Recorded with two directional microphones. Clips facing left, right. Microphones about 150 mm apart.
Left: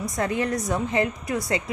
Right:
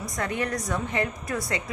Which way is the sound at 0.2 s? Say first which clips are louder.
Left 3 dB; 30° left (ahead or behind).